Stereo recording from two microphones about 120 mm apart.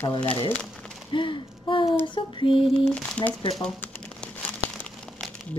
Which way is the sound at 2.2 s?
45° left (ahead or behind).